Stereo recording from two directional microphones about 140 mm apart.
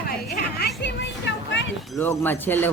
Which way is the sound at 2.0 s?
15° left (ahead or behind).